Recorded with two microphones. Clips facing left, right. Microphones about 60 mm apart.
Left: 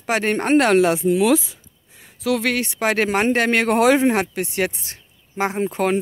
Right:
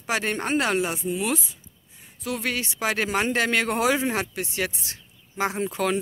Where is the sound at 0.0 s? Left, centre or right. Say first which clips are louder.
Left 6 dB; left.